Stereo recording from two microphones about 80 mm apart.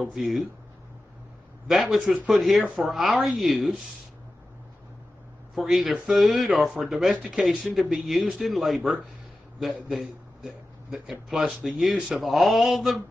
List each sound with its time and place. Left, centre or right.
0.0 s speech: centre
1.7 s speech: centre
5.5 s a man's voice: centre